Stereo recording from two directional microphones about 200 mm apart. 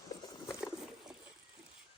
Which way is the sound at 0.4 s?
Centre (ahead or behind).